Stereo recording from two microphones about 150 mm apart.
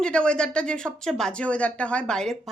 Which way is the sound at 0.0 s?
5° left (ahead or behind).